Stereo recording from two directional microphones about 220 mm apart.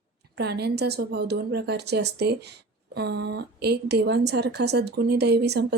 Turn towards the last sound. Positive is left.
turn(degrees=-50)  # may be behind; listen again after turning